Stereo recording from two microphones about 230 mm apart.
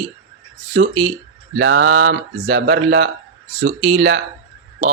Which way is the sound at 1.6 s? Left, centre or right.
Right.